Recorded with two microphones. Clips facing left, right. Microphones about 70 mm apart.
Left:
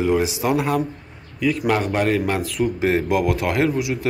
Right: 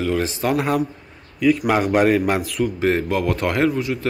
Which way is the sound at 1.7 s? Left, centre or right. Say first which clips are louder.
Right 1 dB; centre.